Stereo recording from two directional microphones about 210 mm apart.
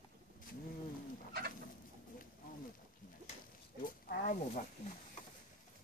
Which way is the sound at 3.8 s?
40° left (ahead or behind).